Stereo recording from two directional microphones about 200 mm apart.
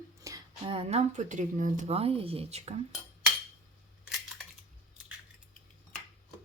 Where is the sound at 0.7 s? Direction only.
30° right (ahead or behind).